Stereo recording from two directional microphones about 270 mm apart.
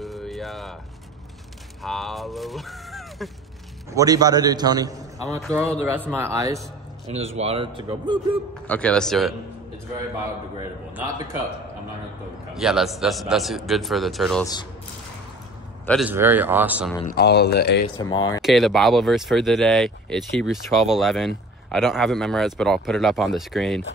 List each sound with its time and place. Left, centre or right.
0.0 s a sound: centre
1.8 s speech: centre
3.9 s a man's voice: centre
7.1 s a man's voice: right
8.6 s speech: centre
12.5 s speech: centre
15.8 s a man's voice: centre
17.0 s speech: left
17.9 s speech: centre
18.4 s speech: centre